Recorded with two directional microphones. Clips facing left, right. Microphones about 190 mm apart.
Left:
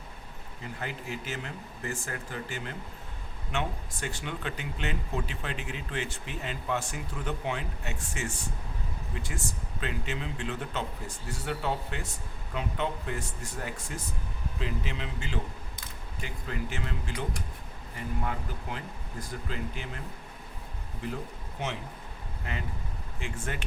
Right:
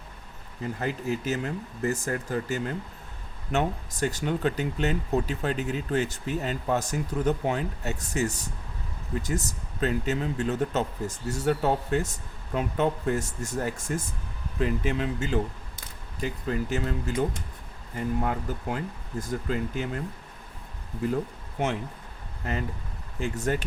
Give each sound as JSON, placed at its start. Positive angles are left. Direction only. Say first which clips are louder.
{"t": 0.8, "sound": "speech", "louder": "right 8 dB", "side_deg": -40}
{"t": 21.6, "sound": "speech", "louder": "right 7 dB", "side_deg": -50}